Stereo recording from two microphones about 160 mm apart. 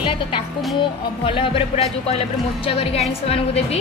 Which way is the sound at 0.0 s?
35° left (ahead or behind).